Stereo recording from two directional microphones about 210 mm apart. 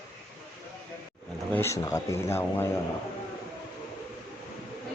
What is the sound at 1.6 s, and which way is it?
Speech, 15° left (ahead or behind).